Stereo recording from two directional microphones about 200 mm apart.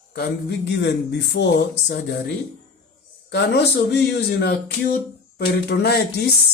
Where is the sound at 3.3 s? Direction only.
60° left (ahead or behind).